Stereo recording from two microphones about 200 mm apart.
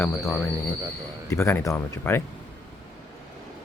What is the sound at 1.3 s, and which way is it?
Speech, 15° left (ahead or behind).